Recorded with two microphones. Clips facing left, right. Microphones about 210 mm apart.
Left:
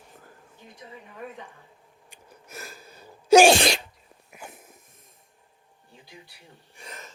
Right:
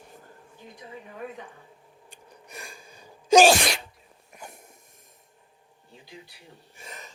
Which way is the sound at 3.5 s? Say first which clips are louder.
Left 3 dB; 30° left (ahead or behind).